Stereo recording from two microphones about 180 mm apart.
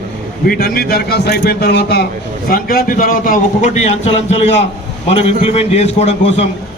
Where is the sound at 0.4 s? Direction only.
55° left (ahead or behind).